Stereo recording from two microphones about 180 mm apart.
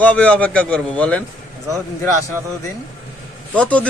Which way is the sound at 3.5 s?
5° left (ahead or behind).